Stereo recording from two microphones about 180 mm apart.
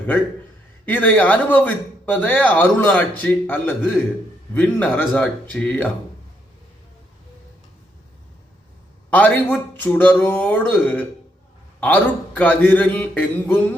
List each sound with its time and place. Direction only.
0.9 s speech: 10° left (ahead or behind)
9.0 s speech: 10° left (ahead or behind)